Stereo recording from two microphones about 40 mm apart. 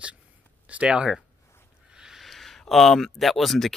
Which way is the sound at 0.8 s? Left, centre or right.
Right.